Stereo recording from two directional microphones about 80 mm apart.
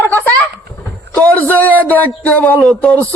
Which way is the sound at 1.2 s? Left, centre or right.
Centre.